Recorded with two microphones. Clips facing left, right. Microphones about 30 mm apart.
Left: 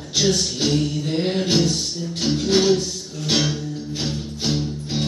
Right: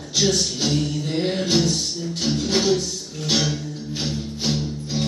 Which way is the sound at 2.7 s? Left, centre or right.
Centre.